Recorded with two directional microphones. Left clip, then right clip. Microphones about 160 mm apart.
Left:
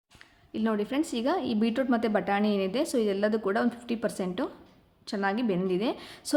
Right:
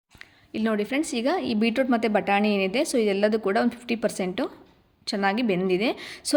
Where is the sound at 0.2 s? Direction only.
20° right (ahead or behind).